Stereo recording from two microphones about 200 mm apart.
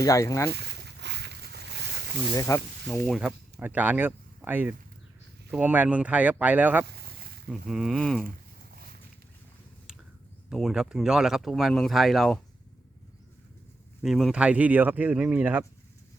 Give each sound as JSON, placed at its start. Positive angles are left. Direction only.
{"t": 0.0, "sound": "speech", "side_deg": 15}
{"t": 0.5, "sound": "a sound", "side_deg": -55}
{"t": 2.3, "sound": "speech", "side_deg": 15}
{"t": 3.1, "sound": "speech", "side_deg": -5}
{"t": 6.8, "sound": "a sound", "side_deg": -50}
{"t": 7.4, "sound": "speech", "side_deg": 0}
{"t": 10.5, "sound": "speech", "side_deg": 0}
{"t": 14.0, "sound": "speech", "side_deg": 0}